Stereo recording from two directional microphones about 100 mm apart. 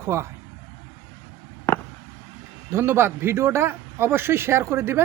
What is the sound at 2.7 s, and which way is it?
A man's voice, 25° right (ahead or behind).